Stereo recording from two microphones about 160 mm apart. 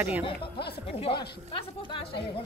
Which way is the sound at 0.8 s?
35° left (ahead or behind).